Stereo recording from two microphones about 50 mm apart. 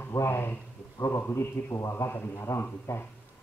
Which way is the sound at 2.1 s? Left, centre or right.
Left.